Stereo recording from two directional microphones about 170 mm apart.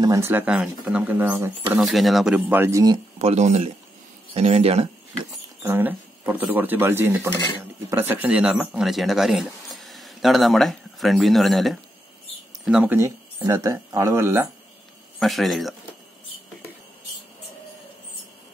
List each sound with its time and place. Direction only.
0.0 s speech: 15° right (ahead or behind)
1.8 s speech: centre (ahead or behind); by 3.0 s 20° right (ahead or behind)
3.2 s speech: 40° right (ahead or behind)
5.6 s speech: 10° right (ahead or behind)
15.1 s speech: centre (ahead or behind)